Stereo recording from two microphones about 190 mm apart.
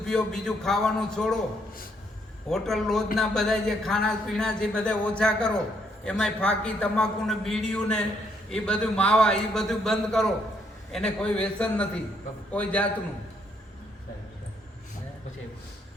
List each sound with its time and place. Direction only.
0.0 s speech: 5° left (ahead or behind)
2.5 s a man's voice: centre (ahead or behind)